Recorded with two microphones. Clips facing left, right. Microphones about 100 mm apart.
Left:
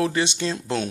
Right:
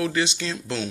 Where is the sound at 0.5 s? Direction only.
50° left (ahead or behind).